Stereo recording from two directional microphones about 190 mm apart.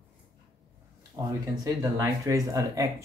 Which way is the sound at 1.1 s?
20° right (ahead or behind).